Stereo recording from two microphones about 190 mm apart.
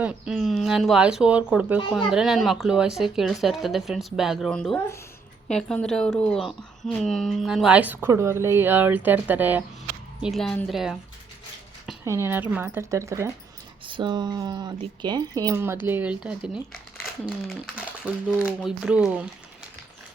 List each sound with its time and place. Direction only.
0.0 s speech: 5° right (ahead or behind)
6.5 s a woman's voice: 25° left (ahead or behind)
7.0 s speech: centre (ahead or behind)
12.0 s speech: 15° right (ahead or behind)
13.8 s speech: 25° right (ahead or behind); by 19.3 s 5° right (ahead or behind)